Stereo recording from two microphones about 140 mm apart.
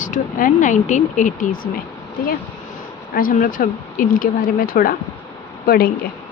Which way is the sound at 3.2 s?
85° left.